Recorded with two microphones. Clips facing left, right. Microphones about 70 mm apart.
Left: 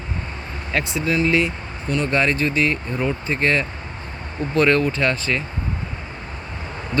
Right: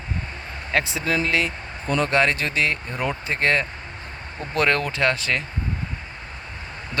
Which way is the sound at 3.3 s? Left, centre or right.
Right.